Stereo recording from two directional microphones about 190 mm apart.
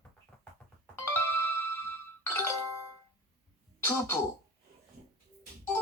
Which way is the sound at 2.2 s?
15° left (ahead or behind).